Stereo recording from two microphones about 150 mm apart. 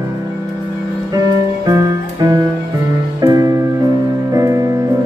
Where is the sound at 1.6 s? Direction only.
25° right (ahead or behind).